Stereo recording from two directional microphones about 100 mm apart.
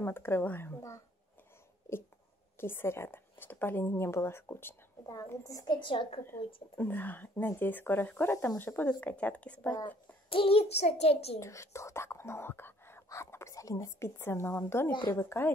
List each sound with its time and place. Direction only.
0.0 s a woman's voice: 25° left (ahead or behind)
5.8 s a woman's voice: 55° left (ahead or behind)
6.8 s speech: 20° left (ahead or behind)
10.3 s a child's voice: 70° left (ahead or behind); by 11.3 s 90° left
11.3 s speech: 30° left (ahead or behind)